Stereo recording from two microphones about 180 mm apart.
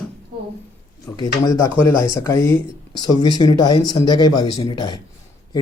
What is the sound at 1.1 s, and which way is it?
Speech, 20° left (ahead or behind).